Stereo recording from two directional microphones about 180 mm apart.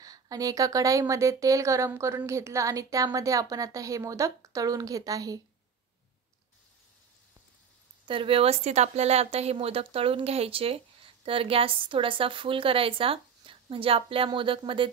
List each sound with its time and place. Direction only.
0.0 s a woman's voice: 20° right (ahead or behind)
8.1 s a woman's voice: 30° right (ahead or behind)